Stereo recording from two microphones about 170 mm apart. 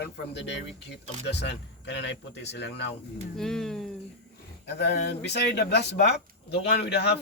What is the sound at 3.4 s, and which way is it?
Speech, 5° left (ahead or behind).